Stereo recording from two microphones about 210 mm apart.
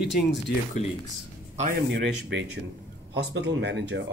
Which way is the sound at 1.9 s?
55° right (ahead or behind).